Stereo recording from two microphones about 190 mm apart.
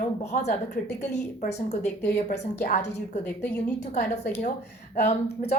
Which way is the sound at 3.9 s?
40° left (ahead or behind).